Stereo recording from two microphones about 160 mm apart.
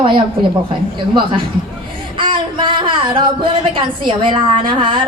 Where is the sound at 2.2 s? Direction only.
30° right (ahead or behind).